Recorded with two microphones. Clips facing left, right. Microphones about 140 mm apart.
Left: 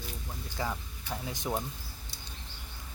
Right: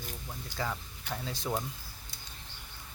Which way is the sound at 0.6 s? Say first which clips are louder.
Left 1 dB; 15° left (ahead or behind).